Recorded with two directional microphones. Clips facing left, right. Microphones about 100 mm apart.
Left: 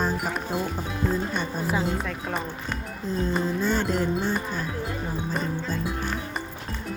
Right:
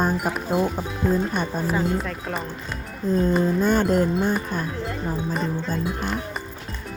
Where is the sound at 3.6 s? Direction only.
50° right (ahead or behind).